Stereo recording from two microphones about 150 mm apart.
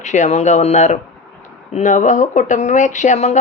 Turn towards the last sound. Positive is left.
turn(degrees=50)  # may be behind; listen again after turning